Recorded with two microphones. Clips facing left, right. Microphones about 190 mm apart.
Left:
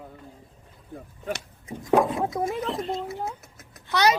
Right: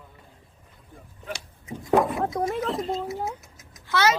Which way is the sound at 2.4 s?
Centre (ahead or behind).